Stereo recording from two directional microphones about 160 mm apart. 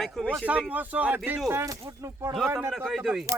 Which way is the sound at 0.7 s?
10° right (ahead or behind).